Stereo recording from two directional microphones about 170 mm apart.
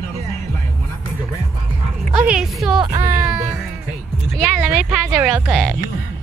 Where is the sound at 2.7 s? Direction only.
25° right (ahead or behind).